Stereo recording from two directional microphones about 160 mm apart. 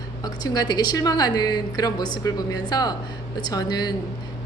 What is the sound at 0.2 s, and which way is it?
A woman's voice, 25° left (ahead or behind).